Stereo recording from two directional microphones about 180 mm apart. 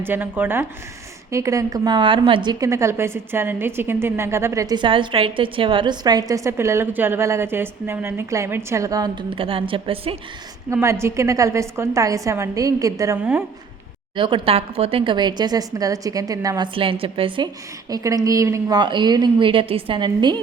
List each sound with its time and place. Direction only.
0.0 s a woman's voice: 10° right (ahead or behind); by 10.2 s 30° right (ahead or behind)
10.7 s a woman's voice: 15° right (ahead or behind)
14.2 s a woman's voice: 30° right (ahead or behind)